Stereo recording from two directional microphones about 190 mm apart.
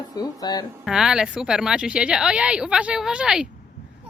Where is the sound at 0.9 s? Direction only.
5° right (ahead or behind).